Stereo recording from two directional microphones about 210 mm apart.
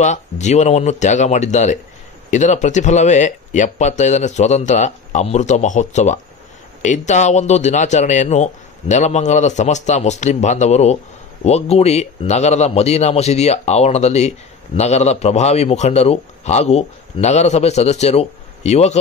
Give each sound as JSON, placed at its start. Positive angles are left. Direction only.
{"t": 0.0, "sound": "speech", "side_deg": 35}